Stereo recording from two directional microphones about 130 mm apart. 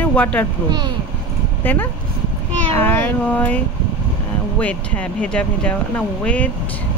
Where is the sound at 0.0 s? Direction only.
10° left (ahead or behind).